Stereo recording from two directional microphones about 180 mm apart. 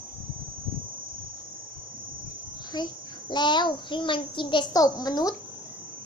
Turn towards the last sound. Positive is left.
turn(degrees=20)  # may be behind; listen again after turning